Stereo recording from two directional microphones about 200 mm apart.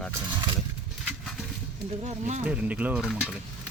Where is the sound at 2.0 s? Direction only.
35° right (ahead or behind).